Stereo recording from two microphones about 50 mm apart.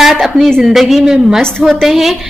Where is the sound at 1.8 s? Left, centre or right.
Centre.